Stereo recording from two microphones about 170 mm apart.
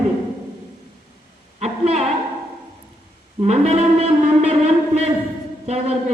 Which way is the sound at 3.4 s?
40° right (ahead or behind).